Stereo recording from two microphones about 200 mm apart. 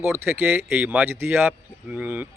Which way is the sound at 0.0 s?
10° right (ahead or behind).